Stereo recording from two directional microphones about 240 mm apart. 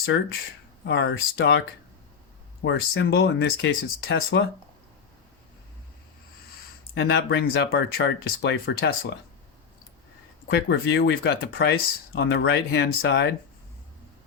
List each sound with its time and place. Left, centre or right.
0.9 s speech: left
2.6 s speech: left
6.9 s speech: left
10.4 s speech: left